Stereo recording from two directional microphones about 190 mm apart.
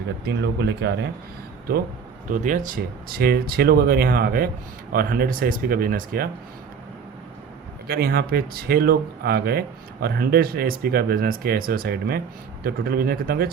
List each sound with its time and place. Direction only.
0.3 s speech: 60° right (ahead or behind)
2.3 s speech: 40° right (ahead or behind)
7.9 s speech: 55° right (ahead or behind)